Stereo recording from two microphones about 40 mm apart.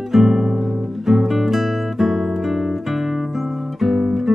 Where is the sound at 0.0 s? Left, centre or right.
Centre.